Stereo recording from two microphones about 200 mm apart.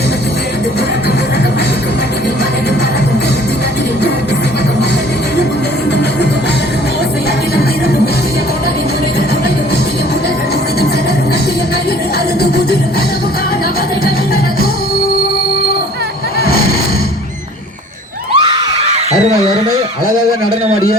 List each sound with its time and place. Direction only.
18.3 s screaming: 20° right (ahead or behind)